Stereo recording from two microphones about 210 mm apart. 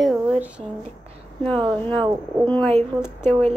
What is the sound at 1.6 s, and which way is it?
Speech, 25° right (ahead or behind).